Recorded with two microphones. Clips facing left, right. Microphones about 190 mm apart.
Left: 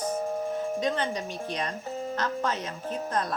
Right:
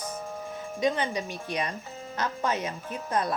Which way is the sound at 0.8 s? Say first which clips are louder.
Right 1 dB; 10° right (ahead or behind).